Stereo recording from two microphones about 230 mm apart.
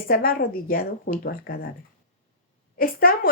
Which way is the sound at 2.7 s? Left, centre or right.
Left.